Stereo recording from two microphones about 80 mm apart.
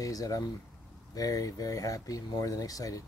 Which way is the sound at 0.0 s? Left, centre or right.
Left.